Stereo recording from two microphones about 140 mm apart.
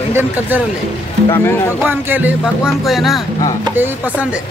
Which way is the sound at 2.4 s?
Centre (ahead or behind).